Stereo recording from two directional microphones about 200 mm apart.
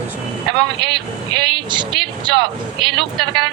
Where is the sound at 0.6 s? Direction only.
25° right (ahead or behind).